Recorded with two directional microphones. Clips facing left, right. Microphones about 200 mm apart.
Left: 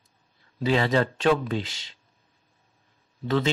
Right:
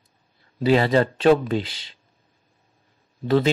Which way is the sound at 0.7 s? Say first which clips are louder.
Right 4 dB; 40° right (ahead or behind).